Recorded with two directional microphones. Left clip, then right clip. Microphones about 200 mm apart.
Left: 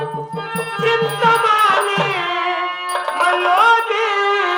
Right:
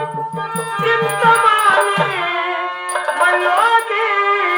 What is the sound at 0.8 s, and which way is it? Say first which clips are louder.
Music: right 1 dB; 25° left (ahead or behind).